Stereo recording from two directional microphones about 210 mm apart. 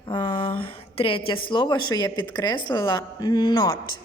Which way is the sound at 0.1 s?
25° left (ahead or behind).